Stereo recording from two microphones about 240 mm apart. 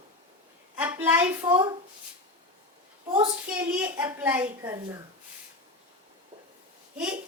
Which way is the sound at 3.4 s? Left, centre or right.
Centre.